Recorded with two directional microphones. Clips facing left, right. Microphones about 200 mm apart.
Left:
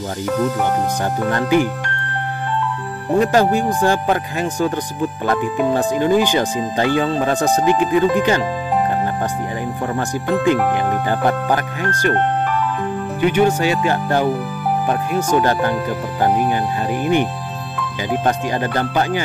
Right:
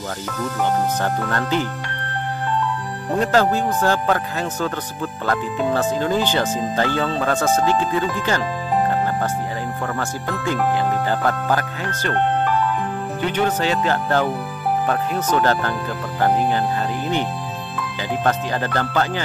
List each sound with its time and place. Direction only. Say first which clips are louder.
1.3 s speech: left 6 dB; 15° left (ahead or behind)
3.2 s speech: left 3 dB; 15° left (ahead or behind)
9.9 s speech: left 6 dB; 15° left (ahead or behind)
13.2 s speech: left 6 dB; 10° left (ahead or behind)
18.2 s speech: left 1 dB; 15° left (ahead or behind)